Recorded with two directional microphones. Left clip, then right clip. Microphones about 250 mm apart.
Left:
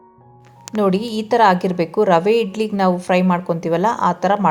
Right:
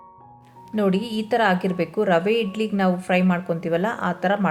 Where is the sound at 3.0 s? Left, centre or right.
Centre.